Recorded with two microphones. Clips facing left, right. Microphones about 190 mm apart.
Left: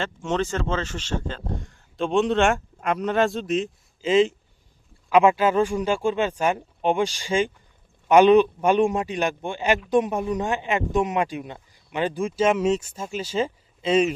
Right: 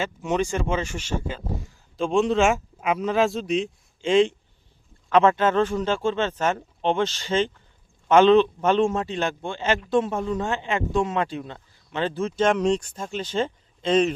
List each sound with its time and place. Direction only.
0.0 s speech: 10° right (ahead or behind); by 14.1 s 10° left (ahead or behind)